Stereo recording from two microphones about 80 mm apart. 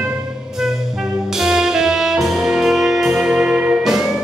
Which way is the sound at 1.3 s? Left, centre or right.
Centre.